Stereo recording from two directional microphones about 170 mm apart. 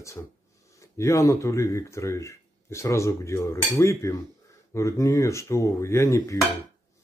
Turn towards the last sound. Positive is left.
turn(degrees=15)  # may be behind; listen again after turning